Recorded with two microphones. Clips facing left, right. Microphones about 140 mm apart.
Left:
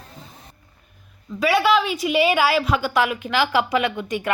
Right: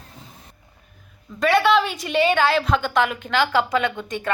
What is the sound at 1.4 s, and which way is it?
A woman's voice, 5° left (ahead or behind).